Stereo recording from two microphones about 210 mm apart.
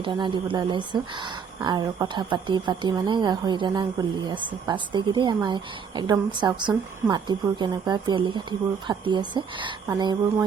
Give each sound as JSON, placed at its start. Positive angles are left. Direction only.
{"t": 0.0, "sound": "speech", "side_deg": -25}